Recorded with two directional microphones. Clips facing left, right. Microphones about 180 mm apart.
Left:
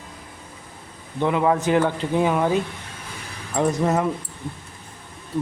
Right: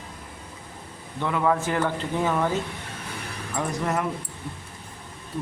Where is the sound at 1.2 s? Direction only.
20° left (ahead or behind).